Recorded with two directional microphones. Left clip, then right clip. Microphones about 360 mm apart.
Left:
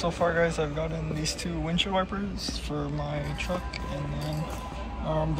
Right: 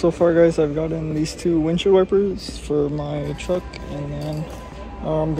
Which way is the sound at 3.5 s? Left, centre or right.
Right.